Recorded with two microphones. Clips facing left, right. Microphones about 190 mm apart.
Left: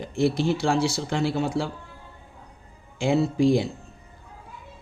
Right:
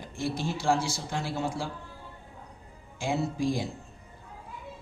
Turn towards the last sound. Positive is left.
turn(degrees=70)  # may be behind; listen again after turning